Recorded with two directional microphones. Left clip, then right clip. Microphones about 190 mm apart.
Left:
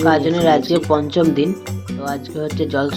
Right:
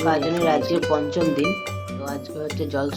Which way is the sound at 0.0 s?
20° left (ahead or behind).